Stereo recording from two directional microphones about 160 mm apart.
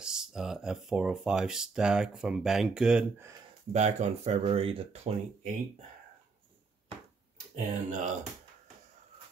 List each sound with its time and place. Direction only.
0.0 s speech: 5° right (ahead or behind)
3.2 s speech: 20° right (ahead or behind)
3.7 s speech: 45° right (ahead or behind)
7.5 s speech: 50° right (ahead or behind)